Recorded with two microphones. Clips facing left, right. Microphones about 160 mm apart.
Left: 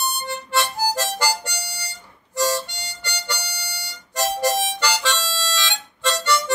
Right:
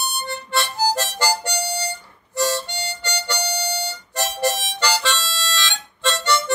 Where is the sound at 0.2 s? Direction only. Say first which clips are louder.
Right 1 dB; 15° left (ahead or behind).